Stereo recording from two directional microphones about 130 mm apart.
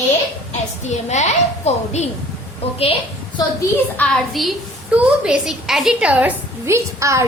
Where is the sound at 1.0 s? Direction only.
60° left (ahead or behind).